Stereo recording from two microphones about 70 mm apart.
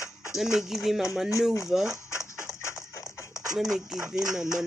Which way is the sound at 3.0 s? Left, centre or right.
Centre.